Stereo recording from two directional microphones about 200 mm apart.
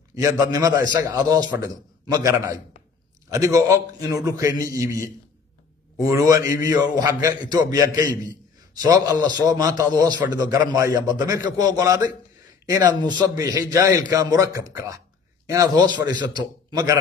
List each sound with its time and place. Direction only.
0.1 s a man's voice: 15° right (ahead or behind)